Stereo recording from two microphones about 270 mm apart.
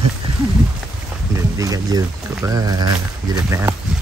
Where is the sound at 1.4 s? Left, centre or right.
Centre.